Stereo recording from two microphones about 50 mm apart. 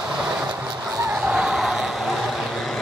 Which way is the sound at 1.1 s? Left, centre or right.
Centre.